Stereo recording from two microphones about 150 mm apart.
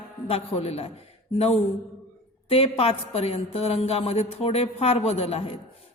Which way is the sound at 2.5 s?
40° left (ahead or behind).